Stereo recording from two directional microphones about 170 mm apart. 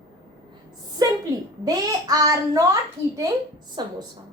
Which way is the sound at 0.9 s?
20° right (ahead or behind).